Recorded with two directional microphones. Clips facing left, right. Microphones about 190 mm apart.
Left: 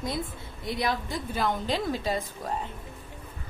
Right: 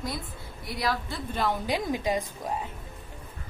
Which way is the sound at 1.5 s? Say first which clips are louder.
Even; 15° right (ahead or behind).